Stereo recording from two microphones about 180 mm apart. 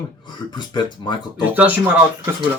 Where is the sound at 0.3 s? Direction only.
25° left (ahead or behind).